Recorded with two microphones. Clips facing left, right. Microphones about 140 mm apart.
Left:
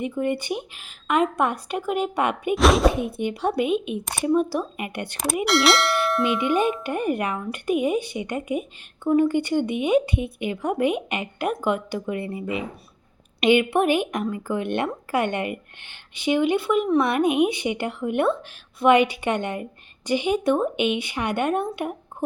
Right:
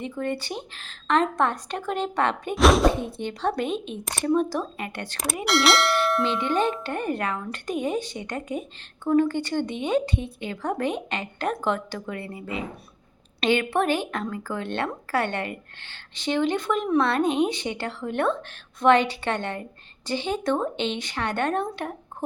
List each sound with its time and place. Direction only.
0.0 s speech: 15° left (ahead or behind)
2.6 s clang: centre (ahead or behind)
3.0 s speech: 10° left (ahead or behind)
5.5 s clang: centre (ahead or behind)
6.8 s speech: 15° left (ahead or behind)